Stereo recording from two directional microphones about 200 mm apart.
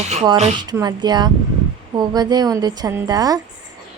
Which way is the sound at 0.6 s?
20° right (ahead or behind).